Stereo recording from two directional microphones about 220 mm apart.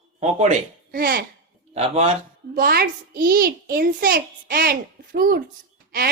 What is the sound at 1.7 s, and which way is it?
Speech, 30° right (ahead or behind).